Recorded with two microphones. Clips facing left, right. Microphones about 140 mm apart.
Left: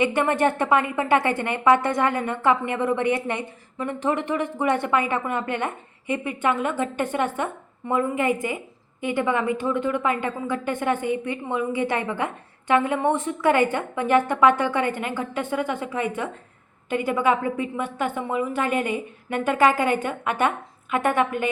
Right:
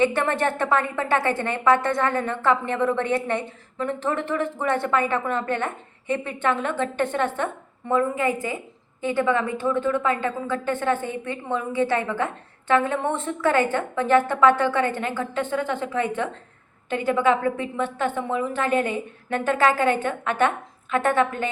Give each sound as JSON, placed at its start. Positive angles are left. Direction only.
{"t": 0.0, "sound": "a woman's voice", "side_deg": 15}